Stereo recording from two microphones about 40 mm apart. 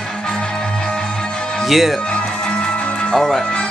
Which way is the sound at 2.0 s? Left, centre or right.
Left.